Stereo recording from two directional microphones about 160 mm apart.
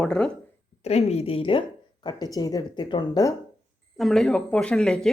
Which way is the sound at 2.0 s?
25° left (ahead or behind).